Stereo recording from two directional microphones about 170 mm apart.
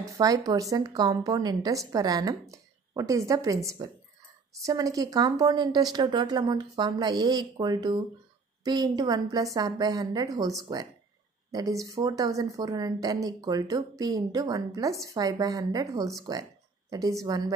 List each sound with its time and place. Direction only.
0.2 s a woman's voice: 20° right (ahead or behind)